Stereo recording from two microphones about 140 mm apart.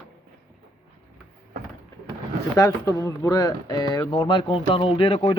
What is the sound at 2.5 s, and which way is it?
Speech, 20° left (ahead or behind).